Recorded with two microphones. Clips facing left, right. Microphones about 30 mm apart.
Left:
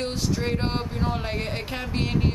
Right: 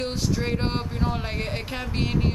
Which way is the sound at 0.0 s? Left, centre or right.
Centre.